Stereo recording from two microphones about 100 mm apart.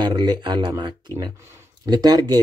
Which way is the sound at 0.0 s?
45° right (ahead or behind).